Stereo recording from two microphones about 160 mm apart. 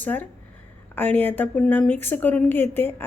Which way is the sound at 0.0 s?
10° left (ahead or behind).